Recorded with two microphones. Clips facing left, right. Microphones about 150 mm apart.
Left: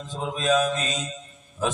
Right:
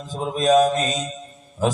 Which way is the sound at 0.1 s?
35° right (ahead or behind).